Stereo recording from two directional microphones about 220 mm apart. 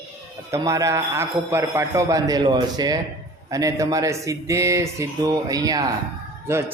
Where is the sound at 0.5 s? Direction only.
15° right (ahead or behind).